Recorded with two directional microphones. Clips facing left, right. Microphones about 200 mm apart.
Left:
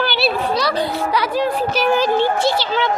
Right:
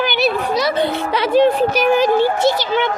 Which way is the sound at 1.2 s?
25° right (ahead or behind).